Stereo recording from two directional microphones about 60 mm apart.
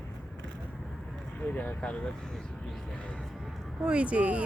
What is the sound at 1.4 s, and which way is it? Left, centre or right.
Speech, left.